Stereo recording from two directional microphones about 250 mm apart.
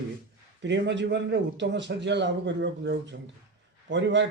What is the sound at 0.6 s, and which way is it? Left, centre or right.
A man's voice, right.